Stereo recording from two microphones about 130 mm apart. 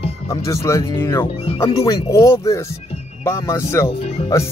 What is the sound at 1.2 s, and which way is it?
Speech, 50° left (ahead or behind).